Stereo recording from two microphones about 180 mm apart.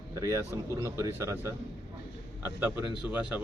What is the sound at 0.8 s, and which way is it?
Speech, 15° right (ahead or behind).